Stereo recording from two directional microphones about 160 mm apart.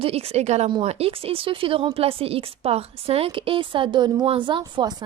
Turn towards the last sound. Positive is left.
turn(degrees=-25)  # may be behind; listen again after turning